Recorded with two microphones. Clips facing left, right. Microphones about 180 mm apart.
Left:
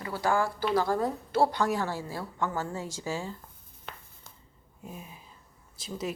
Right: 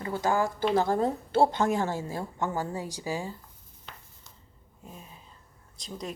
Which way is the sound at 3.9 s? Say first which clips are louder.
Left 4 dB; 55° left (ahead or behind).